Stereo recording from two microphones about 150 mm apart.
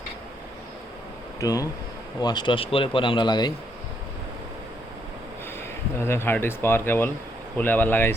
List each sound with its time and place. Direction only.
1.4 s speech: 25° left (ahead or behind)
6.0 s speech: 15° left (ahead or behind)